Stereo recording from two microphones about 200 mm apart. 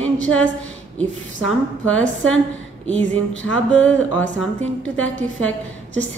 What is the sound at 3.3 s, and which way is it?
Music, 75° left (ahead or behind).